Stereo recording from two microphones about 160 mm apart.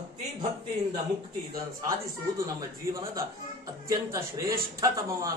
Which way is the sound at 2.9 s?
20° right (ahead or behind).